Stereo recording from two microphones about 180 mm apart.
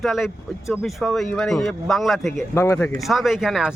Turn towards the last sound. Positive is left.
turn(degrees=0)  # may be behind; listen again after turning